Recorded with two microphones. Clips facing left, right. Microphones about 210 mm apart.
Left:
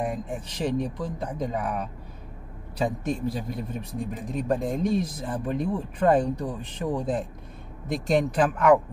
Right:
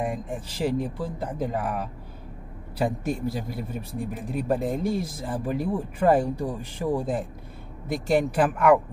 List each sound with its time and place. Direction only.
0.0 s a man's voice: 5° right (ahead or behind)